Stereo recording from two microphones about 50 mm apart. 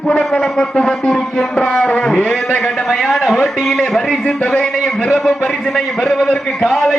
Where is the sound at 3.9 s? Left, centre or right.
Centre.